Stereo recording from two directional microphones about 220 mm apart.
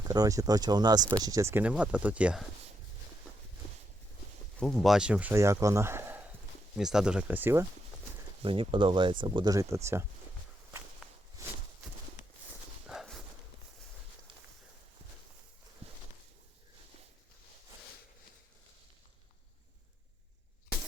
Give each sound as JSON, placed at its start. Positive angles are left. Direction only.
{"t": 0.0, "sound": "speech", "side_deg": -15}
{"t": 4.6, "sound": "speech", "side_deg": 0}
{"t": 8.4, "sound": "speech", "side_deg": -25}
{"t": 11.4, "sound": "a sound", "side_deg": -15}
{"t": 12.9, "sound": "clip-clop", "side_deg": 0}